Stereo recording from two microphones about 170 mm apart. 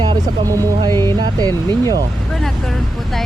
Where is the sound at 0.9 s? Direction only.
15° left (ahead or behind).